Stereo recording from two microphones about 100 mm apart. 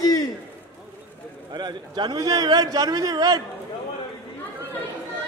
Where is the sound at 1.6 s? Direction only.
45° right (ahead or behind).